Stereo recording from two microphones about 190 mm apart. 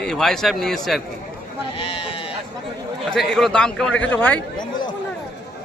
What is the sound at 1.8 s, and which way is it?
Speech, 30° left (ahead or behind).